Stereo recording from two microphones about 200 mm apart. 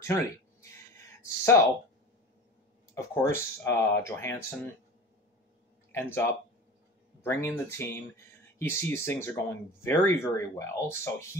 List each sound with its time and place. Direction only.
0.0 s a sound: 15° left (ahead or behind)
1.2 s speech: 15° left (ahead or behind)
2.9 s speech: 10° left (ahead or behind)
5.9 s speech: 10° left (ahead or behind)